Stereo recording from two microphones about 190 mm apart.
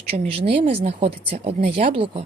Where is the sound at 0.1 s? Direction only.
25° right (ahead or behind).